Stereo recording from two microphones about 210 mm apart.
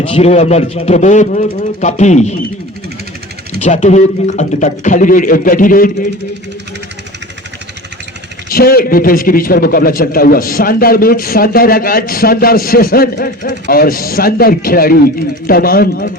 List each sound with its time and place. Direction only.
0.0 s a man's voice: 30° left (ahead or behind)
3.6 s a man's voice: 35° left (ahead or behind)
8.4 s a man's voice: 45° left (ahead or behind)